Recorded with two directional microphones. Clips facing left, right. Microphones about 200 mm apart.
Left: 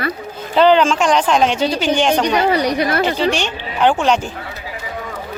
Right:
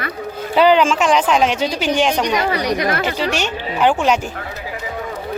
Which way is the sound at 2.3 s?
30° left (ahead or behind).